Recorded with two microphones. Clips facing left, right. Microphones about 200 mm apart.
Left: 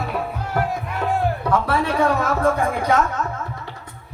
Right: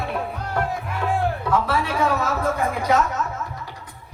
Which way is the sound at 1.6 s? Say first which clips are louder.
Left 3 dB; 55° left (ahead or behind).